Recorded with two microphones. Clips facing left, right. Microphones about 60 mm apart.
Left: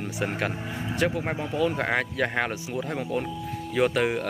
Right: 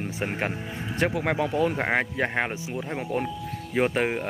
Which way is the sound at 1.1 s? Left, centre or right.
Right.